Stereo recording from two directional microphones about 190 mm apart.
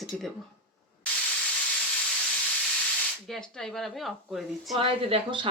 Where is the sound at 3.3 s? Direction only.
5° left (ahead or behind).